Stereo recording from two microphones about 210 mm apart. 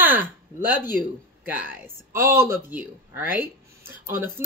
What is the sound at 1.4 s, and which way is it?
Speech, 10° right (ahead or behind).